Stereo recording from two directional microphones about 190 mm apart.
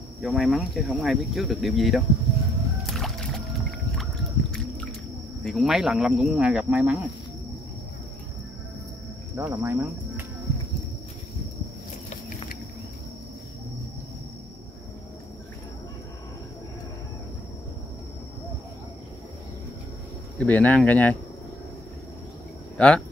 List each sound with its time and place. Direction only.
0.2 s speech: centre (ahead or behind)
2.9 s music: centre (ahead or behind)
3.9 s a sound: 5° left (ahead or behind)
5.4 s speech: centre (ahead or behind)
9.4 s speech: 15° right (ahead or behind)
12.1 s a sound: 40° left (ahead or behind)
20.3 s speech: 10° left (ahead or behind)
22.8 s speech: 5° left (ahead or behind)